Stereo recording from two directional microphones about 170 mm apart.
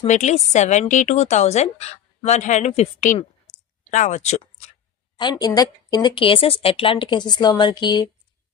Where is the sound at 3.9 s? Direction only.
45° left (ahead or behind).